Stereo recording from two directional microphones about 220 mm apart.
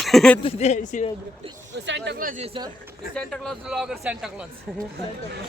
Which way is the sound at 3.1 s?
5° left (ahead or behind).